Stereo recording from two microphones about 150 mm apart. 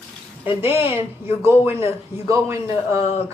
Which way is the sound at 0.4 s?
15° right (ahead or behind).